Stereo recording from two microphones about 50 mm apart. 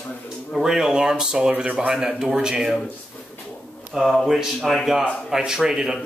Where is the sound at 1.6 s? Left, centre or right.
Right.